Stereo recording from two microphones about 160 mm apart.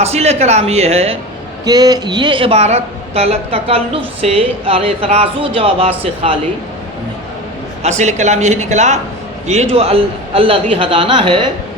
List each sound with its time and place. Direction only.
0.0 s speech: 40° right (ahead or behind)
1.6 s speech: 25° right (ahead or behind)
7.8 s speech: 45° right (ahead or behind); by 11.5 s 30° right (ahead or behind)